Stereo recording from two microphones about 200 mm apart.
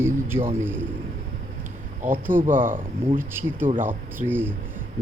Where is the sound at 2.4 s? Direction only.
40° right (ahead or behind).